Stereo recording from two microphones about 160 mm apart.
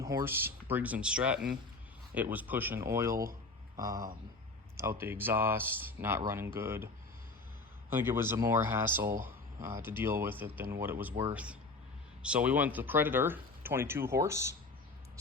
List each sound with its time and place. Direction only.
0.0 s speech: 20° right (ahead or behind)
12.2 s speech: 10° right (ahead or behind)